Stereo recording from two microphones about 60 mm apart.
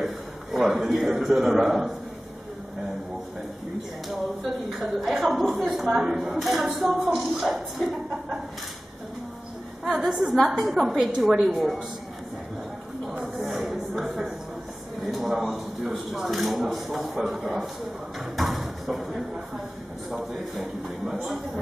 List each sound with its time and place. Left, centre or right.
0.0 s a sound: centre
1.2 s speech: centre
4.1 s speech: centre
7.1 s a woman's voice: centre
7.4 s speech: centre
9.8 s a woman's voice: centre
10.6 s speech: centre
13.2 s a sound: centre
15.0 s a woman's voice: centre